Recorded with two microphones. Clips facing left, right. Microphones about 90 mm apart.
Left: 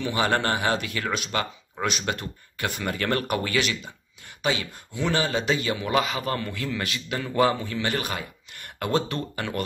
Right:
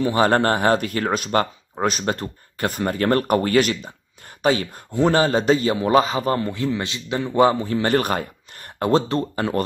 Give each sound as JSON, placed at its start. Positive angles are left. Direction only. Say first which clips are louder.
{"t": 0.0, "sound": "speech", "louder": "right 7 dB", "side_deg": -40}
{"t": 7.6, "sound": "speech", "louder": "right 8 dB", "side_deg": -40}
{"t": 8.7, "sound": "speech", "louder": "right 7 dB", "side_deg": -30}